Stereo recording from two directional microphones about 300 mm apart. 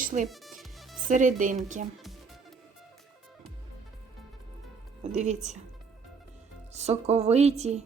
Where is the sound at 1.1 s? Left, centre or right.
Right.